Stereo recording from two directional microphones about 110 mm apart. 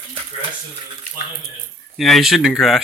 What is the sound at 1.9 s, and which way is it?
Speech, centre (ahead or behind).